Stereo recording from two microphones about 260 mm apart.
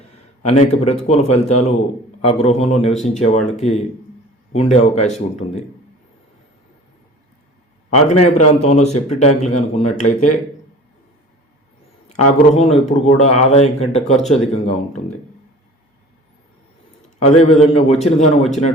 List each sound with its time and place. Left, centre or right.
0.4 s speech: left
7.9 s speech: left
12.0 s speech: left
17.2 s speech: left